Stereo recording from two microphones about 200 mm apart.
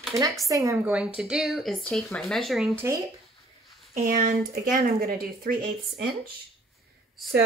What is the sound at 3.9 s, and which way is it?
Speech, 40° right (ahead or behind).